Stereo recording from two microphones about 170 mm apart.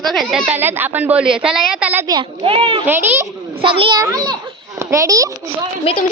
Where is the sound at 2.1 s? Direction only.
30° right (ahead or behind).